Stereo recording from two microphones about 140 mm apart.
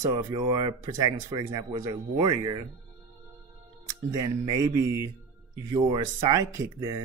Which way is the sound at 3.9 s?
25° right (ahead or behind).